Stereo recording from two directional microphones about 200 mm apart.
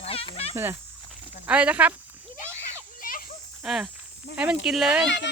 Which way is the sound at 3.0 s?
45° left (ahead or behind).